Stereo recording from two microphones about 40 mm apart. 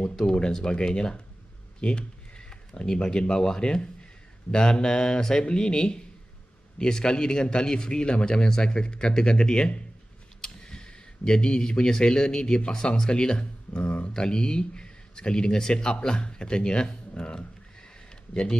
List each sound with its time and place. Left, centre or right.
0.0 s a man's voice: centre
3.8 s a sound: left
4.7 s a man's voice: left